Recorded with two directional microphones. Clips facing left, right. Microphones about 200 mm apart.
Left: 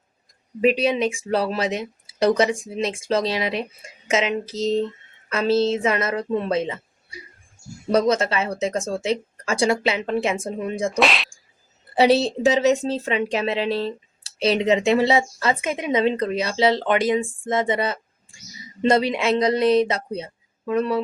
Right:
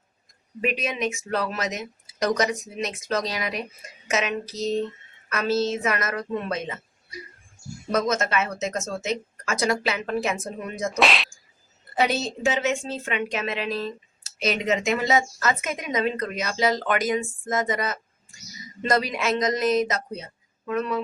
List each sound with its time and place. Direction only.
0.6 s speech: 30° left (ahead or behind)
7.9 s speech: 35° left (ahead or behind)
10.9 s speech: centre (ahead or behind)
11.9 s speech: 35° left (ahead or behind)